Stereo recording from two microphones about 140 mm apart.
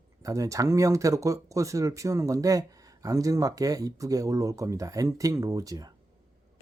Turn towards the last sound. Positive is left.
turn(degrees=-25)  # may be behind; listen again after turning